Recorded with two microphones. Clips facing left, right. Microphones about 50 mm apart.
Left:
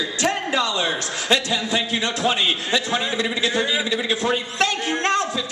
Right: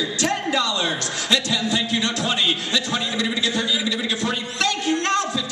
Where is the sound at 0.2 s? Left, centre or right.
Left.